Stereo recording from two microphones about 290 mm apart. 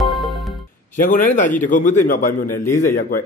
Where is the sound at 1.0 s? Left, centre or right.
Left.